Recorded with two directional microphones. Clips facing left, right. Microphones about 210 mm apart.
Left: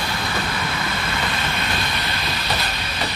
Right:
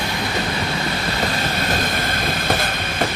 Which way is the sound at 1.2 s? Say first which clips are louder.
Right 4 dB; 40° right (ahead or behind).